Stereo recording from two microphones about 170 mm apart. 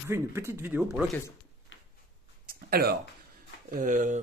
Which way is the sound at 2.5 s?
60° right (ahead or behind).